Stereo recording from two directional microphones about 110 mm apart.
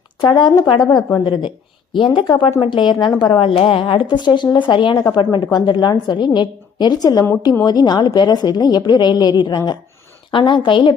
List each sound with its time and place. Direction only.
0.2 s a woman's voice: 45° left (ahead or behind)